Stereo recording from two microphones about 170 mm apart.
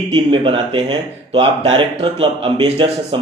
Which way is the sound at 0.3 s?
30° right (ahead or behind).